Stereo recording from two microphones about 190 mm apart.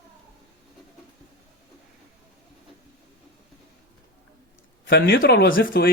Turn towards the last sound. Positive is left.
turn(degrees=50)  # may be behind; listen again after turning